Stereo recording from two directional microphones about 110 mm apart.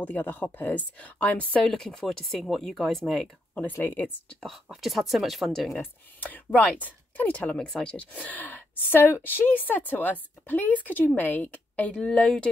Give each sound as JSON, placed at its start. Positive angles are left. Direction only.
{"t": 0.0, "sound": "speech", "side_deg": 15}
{"t": 3.5, "sound": "speech", "side_deg": 15}
{"t": 4.5, "sound": "speech", "side_deg": 0}
{"t": 5.8, "sound": "speech", "side_deg": 15}